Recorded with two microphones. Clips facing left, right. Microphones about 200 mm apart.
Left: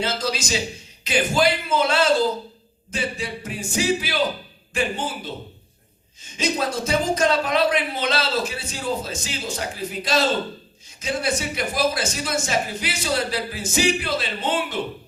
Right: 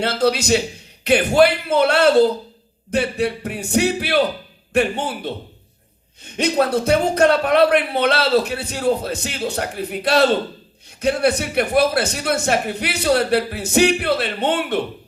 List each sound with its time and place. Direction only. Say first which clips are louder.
0.0 s speech: right 7 dB; 60° right (ahead or behind)